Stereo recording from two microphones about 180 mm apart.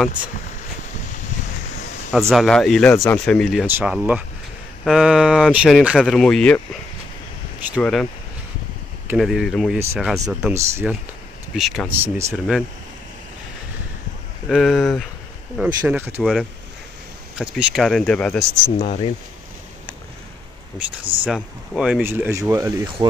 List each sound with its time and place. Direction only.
2.1 s speech: centre (ahead or behind)
3.6 s speech: 10° right (ahead or behind)
7.8 s speech: 5° left (ahead or behind)
10.2 s speech: 15° right (ahead or behind)
11.5 s speech: centre (ahead or behind)
12.0 s speech: 15° right (ahead or behind)
14.5 s speech: centre (ahead or behind)
18.8 s speech: 35° left (ahead or behind)
21.0 s speech: 30° right (ahead or behind)
21.3 s speech: 5° right (ahead or behind)